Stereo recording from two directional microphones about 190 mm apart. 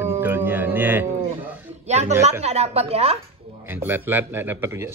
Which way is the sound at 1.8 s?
35° right (ahead or behind).